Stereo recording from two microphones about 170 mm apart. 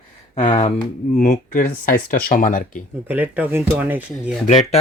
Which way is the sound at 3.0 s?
10° right (ahead or behind).